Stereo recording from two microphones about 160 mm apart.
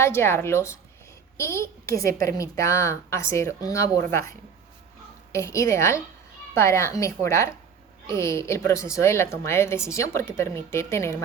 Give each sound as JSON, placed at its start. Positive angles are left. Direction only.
{"t": 0.0, "sound": "a woman's voice", "side_deg": 15}